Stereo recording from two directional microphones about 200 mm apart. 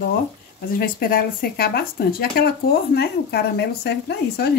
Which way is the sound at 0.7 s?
50° left (ahead or behind).